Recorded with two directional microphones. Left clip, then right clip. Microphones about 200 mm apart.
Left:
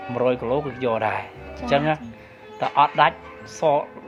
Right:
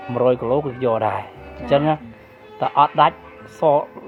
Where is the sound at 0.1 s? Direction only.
50° right (ahead or behind).